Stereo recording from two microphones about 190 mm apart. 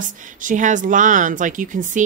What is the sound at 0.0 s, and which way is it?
A woman's voice, 45° right (ahead or behind).